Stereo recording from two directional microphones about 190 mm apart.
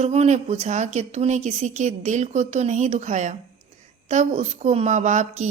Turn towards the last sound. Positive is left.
turn(degrees=-40)  # may be behind; listen again after turning